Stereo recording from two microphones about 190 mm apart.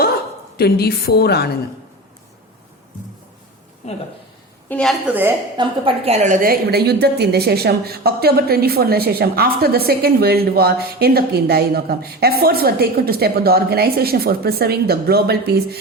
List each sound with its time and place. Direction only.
0.5 s a woman's voice: 55° left (ahead or behind)
3.8 s speech: 35° left (ahead or behind)
4.7 s a woman's voice: centre (ahead or behind)
5.5 s a woman's voice: 30° right (ahead or behind); by 15.8 s 55° right (ahead or behind)